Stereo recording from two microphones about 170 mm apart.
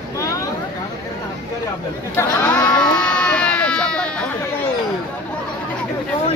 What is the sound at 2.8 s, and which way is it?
Baby cry, 5° left (ahead or behind).